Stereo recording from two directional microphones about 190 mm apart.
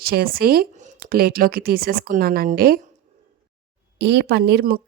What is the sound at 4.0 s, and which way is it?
Speech, 60° right (ahead or behind).